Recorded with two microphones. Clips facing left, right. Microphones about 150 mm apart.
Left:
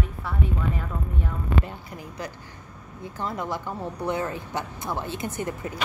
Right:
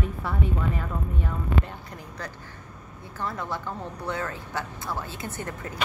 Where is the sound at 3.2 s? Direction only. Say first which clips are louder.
Left 2 dB; 15° left (ahead or behind).